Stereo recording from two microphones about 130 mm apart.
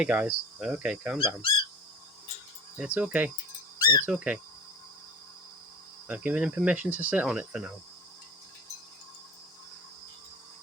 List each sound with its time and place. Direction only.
0.0 s speech: 10° right (ahead or behind)
1.2 s speech: 40° left (ahead or behind)
2.7 s speech: 10° right (ahead or behind)
3.8 s insect: 30° left (ahead or behind)
4.0 s speech: 10° right (ahead or behind)
6.1 s speech: 10° right (ahead or behind)